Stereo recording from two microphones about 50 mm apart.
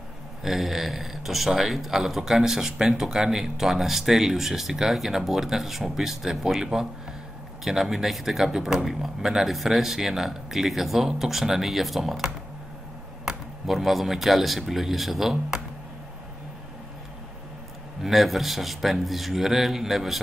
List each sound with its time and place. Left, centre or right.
0.4 s speech: centre
18.0 s speech: centre